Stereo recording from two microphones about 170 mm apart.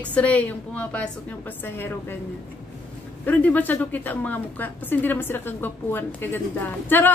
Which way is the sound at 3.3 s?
10° left (ahead or behind).